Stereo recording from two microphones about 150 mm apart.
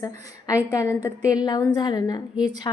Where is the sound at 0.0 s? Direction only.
25° left (ahead or behind).